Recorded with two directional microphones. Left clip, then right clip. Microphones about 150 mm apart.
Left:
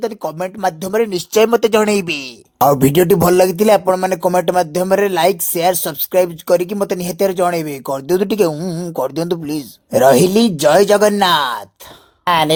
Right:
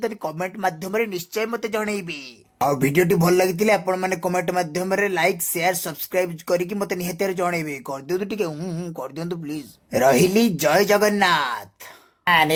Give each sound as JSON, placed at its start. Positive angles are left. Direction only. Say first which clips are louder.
{"t": 0.0, "sound": "speech", "louder": "left 5 dB", "side_deg": 25}
{"t": 1.3, "sound": "speech", "louder": "left 13 dB", "side_deg": 55}
{"t": 8.5, "sound": "speech", "louder": "left 8 dB", "side_deg": 35}
{"t": 9.0, "sound": "speech", "louder": "left 15 dB", "side_deg": 45}